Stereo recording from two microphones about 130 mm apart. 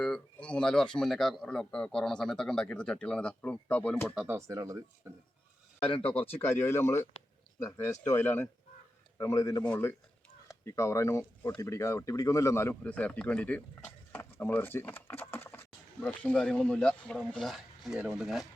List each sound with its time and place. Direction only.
0.0 s speech: 10° left (ahead or behind)
4.3 s speech: 25° right (ahead or behind)
6.3 s speech: 20° left (ahead or behind)
9.6 s speech: 15° left (ahead or behind)